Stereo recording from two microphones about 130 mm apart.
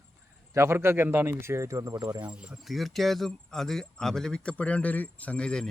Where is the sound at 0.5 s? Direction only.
20° right (ahead or behind).